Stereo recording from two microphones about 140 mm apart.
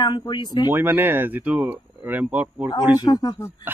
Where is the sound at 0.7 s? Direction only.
15° right (ahead or behind).